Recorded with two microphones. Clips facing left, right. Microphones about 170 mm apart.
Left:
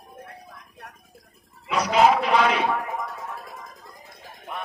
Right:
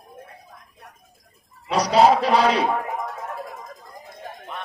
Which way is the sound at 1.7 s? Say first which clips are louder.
Right 3 dB; 35° right (ahead or behind).